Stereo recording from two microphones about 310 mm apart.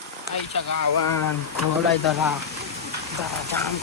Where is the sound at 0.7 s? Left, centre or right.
Left.